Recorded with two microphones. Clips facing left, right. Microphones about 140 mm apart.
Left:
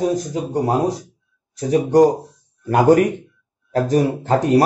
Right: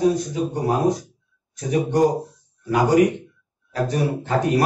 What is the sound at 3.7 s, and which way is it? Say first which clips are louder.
Speech: left 5 dB; 45° left (ahead or behind).